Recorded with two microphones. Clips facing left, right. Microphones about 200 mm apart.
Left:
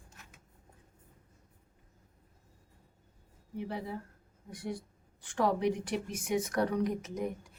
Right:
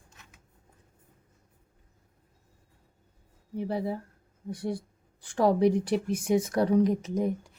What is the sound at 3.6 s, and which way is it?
A woman's voice, 35° right (ahead or behind).